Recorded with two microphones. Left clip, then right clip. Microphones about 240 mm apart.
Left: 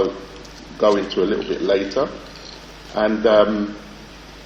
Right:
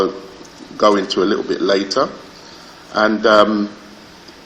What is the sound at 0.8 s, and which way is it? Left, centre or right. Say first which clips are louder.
A man's voice: right 3 dB; right.